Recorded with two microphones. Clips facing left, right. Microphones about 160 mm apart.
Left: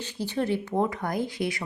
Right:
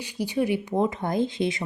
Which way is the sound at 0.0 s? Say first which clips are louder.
Right 3 dB; 10° right (ahead or behind).